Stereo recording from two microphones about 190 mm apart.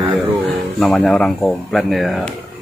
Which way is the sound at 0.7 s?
Centre (ahead or behind).